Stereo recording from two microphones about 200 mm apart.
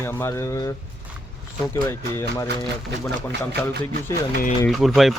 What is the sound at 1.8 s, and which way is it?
Speech, 15° left (ahead or behind).